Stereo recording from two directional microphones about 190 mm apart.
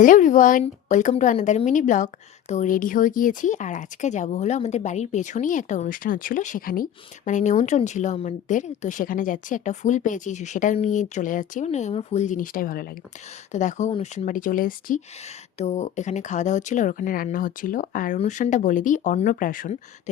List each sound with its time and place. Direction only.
0.0 s speech: 45° left (ahead or behind)
15.5 s speech: 35° left (ahead or behind)